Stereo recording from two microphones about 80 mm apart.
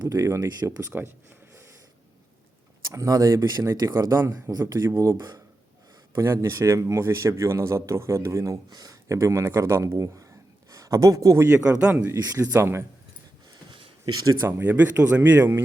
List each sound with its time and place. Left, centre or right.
0.0 s speech: right
2.9 s speech: right
6.1 s speech: right
8.7 s speech: right
9.0 s speech: right
11.4 s speech: centre
12.2 s speech: right
12.5 s speech: right
13.5 s a sound: right
14.4 s a man's voice: right